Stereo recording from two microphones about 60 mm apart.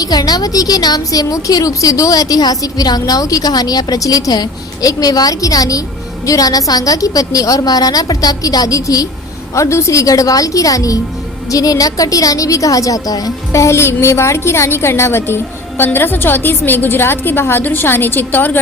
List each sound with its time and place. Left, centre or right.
0.0 s a woman's voice: left
9.6 s a woman's voice: left
13.5 s a woman's voice: left
15.8 s a woman's voice: left